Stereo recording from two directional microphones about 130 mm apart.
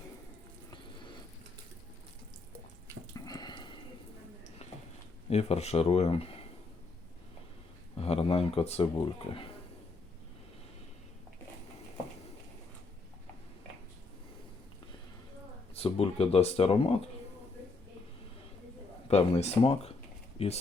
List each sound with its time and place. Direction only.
0.7 s a sound: 35° left (ahead or behind)
3.2 s a sound: 30° left (ahead or behind)
5.3 s speech: 55° left (ahead or behind)
8.0 s speech: 50° left (ahead or behind)
15.7 s speech: 50° left (ahead or behind)
19.0 s speech: 50° left (ahead or behind)